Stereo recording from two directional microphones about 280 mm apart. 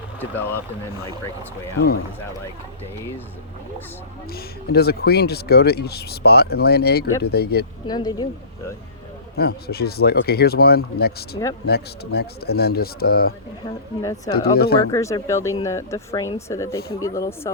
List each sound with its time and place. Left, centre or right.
0.2 s speech: centre
4.3 s speech: left
7.9 s speech: centre
9.4 s speech: left
14.0 s speech: centre
14.5 s speech: left
14.8 s speech: centre